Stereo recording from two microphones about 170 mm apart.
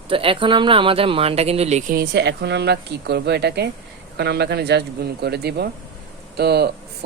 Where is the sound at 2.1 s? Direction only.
85° right.